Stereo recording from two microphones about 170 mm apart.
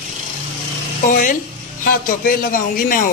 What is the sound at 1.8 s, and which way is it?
A man's voice, 55° left (ahead or behind).